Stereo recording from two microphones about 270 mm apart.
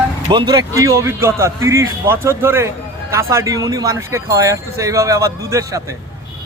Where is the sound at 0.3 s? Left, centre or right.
Centre.